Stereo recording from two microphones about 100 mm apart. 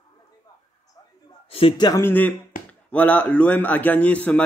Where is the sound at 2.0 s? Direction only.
20° left (ahead or behind).